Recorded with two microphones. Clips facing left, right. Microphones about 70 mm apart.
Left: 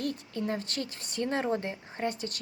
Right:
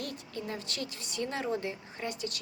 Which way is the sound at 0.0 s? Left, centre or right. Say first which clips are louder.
Left 6 dB; left.